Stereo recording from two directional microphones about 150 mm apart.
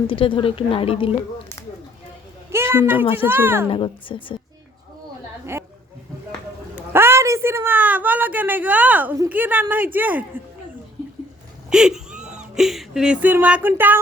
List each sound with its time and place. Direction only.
0.1 s a woman's voice: 35° left (ahead or behind)
2.5 s a sound: 15° right (ahead or behind)
3.2 s a woman's voice: 15° right (ahead or behind)
3.7 s a woman's voice: 35° left (ahead or behind)
6.9 s a woman's voice: 15° right (ahead or behind)
11.7 s speech: 5° right (ahead or behind)